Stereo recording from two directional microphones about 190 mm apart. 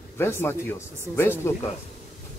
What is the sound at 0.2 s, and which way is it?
A man's voice, 10° left (ahead or behind).